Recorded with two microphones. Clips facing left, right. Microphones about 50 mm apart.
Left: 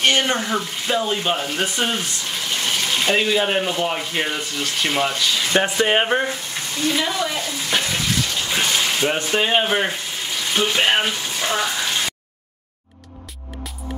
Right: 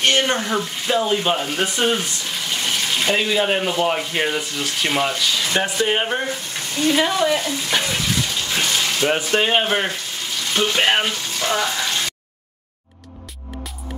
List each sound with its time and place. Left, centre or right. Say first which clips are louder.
0.0 s speech: even; centre
5.5 s speech: left 4 dB; left
6.8 s speech: right 4 dB; right
7.7 s bathtub: even; centre
8.4 s a sound: left 1 dB; centre
9.1 s speech: right 3 dB; centre
11.1 s frying: even; centre